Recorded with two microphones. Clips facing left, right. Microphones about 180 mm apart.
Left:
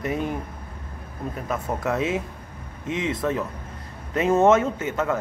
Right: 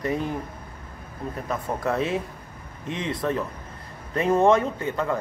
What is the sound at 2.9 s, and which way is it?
Speech, 20° left (ahead or behind).